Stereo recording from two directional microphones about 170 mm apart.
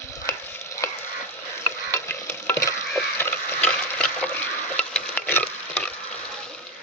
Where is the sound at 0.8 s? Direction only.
20° left (ahead or behind).